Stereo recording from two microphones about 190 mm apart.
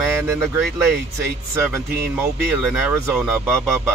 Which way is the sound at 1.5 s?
15° right (ahead or behind).